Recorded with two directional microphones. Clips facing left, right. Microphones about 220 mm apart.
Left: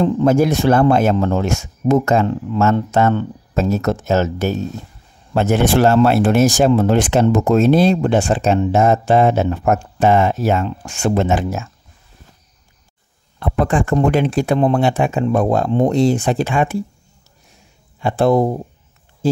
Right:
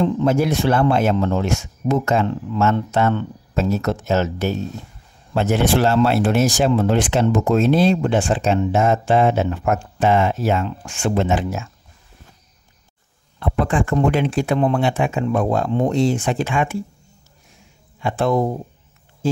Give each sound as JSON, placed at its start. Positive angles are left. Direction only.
{"t": 0.0, "sound": "speech", "side_deg": 45}
{"t": 13.4, "sound": "speech", "side_deg": 45}
{"t": 18.0, "sound": "speech", "side_deg": 35}